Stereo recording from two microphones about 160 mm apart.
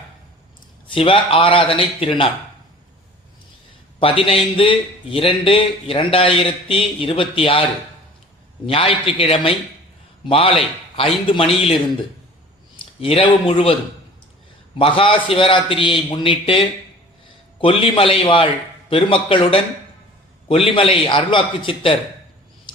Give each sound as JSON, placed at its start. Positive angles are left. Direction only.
{"t": 0.9, "sound": "a man's voice", "side_deg": 35}
{"t": 4.0, "sound": "a man's voice", "side_deg": 35}
{"t": 8.6, "sound": "a man's voice", "side_deg": 35}
{"t": 13.0, "sound": "a man's voice", "side_deg": 35}
{"t": 14.8, "sound": "a man's voice", "side_deg": 35}